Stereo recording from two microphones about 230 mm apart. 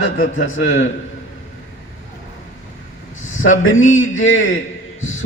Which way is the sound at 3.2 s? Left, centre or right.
Left.